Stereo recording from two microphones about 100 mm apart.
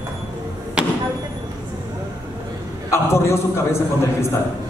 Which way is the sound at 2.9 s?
25° left (ahead or behind).